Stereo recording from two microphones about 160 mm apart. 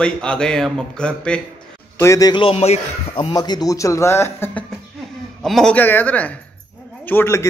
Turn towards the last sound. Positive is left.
turn(degrees=15)  # may be behind; listen again after turning